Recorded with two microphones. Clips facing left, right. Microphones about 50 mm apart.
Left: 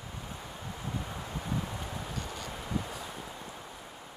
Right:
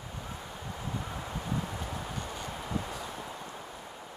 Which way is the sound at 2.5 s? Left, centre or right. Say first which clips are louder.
Even; centre.